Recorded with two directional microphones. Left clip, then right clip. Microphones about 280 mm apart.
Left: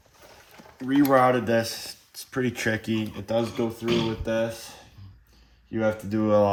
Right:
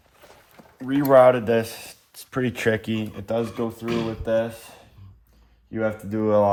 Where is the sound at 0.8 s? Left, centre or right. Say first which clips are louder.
Right 5 dB; right.